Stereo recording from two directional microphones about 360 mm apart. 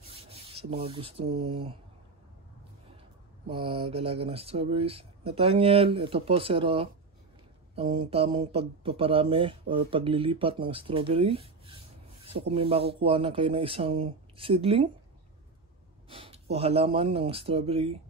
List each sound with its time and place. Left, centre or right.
0.1 s rub: centre
1.5 s speech: centre
3.4 s speech: centre
8.5 s speech: centre
16.1 s speech: centre